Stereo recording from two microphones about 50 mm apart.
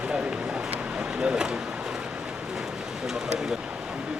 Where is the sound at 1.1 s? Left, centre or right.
Centre.